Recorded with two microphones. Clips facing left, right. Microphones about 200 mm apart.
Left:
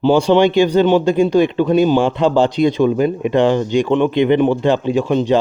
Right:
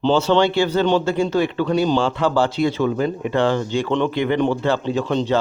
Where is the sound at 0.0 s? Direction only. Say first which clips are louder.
Left 4 dB; 15° left (ahead or behind).